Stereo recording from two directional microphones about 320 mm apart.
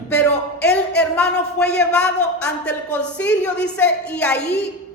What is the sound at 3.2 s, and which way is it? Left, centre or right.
Speech, left.